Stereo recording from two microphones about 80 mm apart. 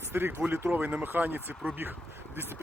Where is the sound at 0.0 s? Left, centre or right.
Right.